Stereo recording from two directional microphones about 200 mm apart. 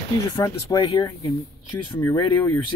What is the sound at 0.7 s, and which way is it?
Speech, 20° left (ahead or behind).